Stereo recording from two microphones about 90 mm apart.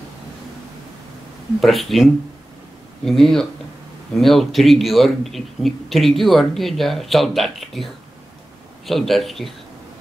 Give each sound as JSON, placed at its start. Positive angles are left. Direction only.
{"t": 1.6, "sound": "a man's voice", "side_deg": 0}
{"t": 3.1, "sound": "a man's voice", "side_deg": 5}